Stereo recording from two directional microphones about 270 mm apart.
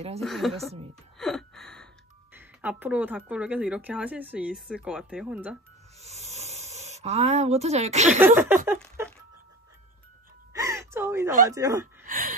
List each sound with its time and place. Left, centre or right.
0.2 s a woman's voice: centre
5.9 s a sound: right
8.4 s speech: centre
10.5 s gasp: centre
11.4 s speech: centre
12.1 s a sound: right